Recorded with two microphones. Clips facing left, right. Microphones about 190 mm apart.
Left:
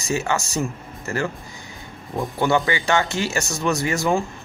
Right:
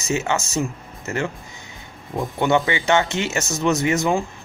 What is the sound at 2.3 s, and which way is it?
Speech, 20° right (ahead or behind).